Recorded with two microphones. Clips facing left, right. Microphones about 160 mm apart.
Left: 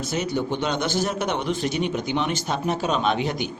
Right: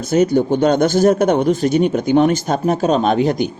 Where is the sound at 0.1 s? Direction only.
45° right (ahead or behind).